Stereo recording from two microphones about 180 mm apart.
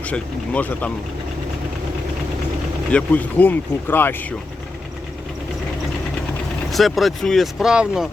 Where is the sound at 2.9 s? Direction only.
10° left (ahead or behind).